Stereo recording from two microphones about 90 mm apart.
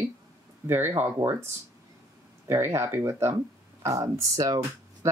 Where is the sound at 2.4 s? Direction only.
30° right (ahead or behind).